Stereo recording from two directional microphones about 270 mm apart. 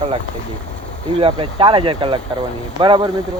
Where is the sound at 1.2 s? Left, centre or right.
Centre.